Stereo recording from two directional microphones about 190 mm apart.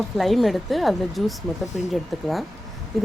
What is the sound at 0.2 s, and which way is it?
Speech, centre (ahead or behind).